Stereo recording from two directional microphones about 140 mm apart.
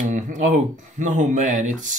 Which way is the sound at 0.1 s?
60° right (ahead or behind).